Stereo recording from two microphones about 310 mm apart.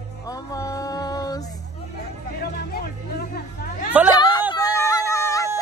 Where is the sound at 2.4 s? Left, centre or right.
Left.